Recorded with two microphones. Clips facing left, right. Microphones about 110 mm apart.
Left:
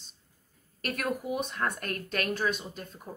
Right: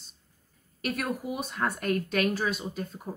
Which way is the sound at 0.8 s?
Centre (ahead or behind).